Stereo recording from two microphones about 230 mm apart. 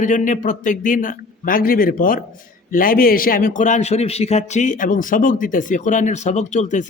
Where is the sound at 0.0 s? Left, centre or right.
Left.